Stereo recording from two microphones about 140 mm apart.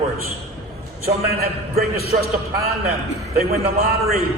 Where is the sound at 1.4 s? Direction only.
90° right.